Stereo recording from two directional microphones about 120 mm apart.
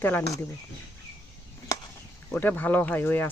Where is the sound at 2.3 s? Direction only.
15° left (ahead or behind).